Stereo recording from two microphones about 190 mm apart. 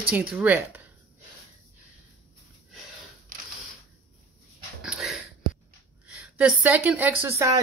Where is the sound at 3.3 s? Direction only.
45° right (ahead or behind).